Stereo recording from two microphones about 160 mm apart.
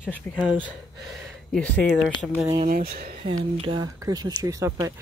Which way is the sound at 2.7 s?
70° right (ahead or behind).